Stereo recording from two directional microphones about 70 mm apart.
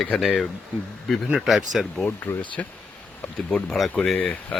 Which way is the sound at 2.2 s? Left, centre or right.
Left.